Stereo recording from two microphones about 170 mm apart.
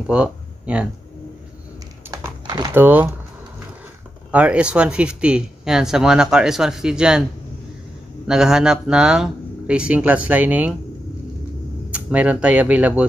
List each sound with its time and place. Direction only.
0.0 s a sound: 5° right (ahead or behind)
2.0 s typing: 25° right (ahead or behind)
2.7 s a man's voice: 10° right (ahead or behind)
4.3 s speech: 5° right (ahead or behind)
8.3 s a man's voice: 5° right (ahead or behind)
11.9 s a man's voice: 10° right (ahead or behind)